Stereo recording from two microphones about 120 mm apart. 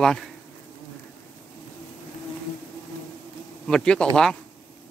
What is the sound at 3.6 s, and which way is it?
Speech, 5° left (ahead or behind).